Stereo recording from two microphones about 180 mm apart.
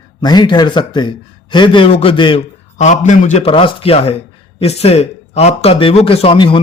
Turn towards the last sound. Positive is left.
turn(degrees=30)  # may be behind; listen again after turning